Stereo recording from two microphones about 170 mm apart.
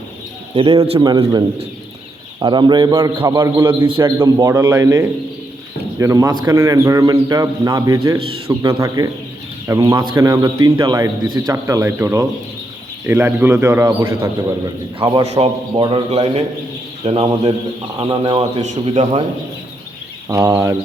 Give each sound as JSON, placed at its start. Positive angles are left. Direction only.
{"t": 0.5, "sound": "a man's voice", "side_deg": -30}
{"t": 20.2, "sound": "a man's voice", "side_deg": -20}